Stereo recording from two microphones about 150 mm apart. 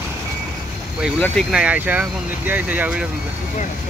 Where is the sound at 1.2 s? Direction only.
5° left (ahead or behind).